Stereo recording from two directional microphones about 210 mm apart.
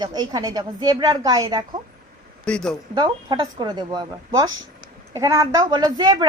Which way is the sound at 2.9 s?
20° right (ahead or behind).